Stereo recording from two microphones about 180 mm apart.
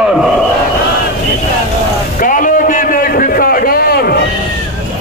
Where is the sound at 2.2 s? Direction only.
50° left (ahead or behind).